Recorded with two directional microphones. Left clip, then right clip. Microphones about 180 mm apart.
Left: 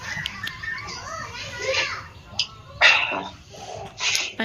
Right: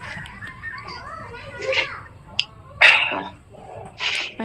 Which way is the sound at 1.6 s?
10° right (ahead or behind).